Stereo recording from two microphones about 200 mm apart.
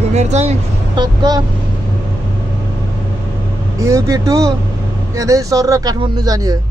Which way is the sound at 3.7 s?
15° right (ahead or behind).